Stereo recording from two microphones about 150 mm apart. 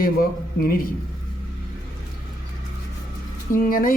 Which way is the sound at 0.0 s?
75° left (ahead or behind).